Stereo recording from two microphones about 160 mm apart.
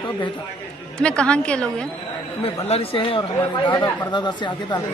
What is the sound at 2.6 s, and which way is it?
A man's voice, 35° left (ahead or behind).